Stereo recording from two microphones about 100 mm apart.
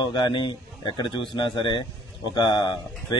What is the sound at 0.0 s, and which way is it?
A man's voice, 50° left (ahead or behind).